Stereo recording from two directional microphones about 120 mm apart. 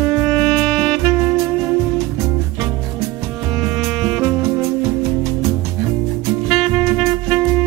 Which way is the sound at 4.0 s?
20° right (ahead or behind).